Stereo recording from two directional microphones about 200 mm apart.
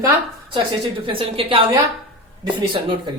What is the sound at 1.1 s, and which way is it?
Speech, 25° right (ahead or behind).